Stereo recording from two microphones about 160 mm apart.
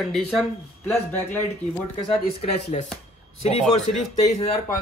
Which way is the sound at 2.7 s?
40° left (ahead or behind).